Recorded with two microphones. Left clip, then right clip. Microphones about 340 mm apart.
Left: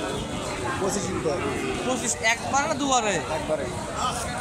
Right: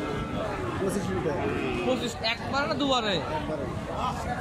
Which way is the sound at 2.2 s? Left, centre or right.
Centre.